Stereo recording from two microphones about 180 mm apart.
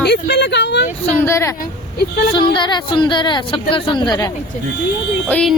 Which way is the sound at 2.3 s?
25° left (ahead or behind).